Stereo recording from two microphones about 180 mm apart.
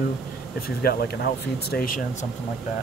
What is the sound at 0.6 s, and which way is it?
Speech, 60° left (ahead or behind).